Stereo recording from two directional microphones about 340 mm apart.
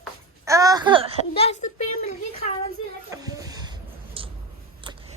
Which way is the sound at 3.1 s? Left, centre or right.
Centre.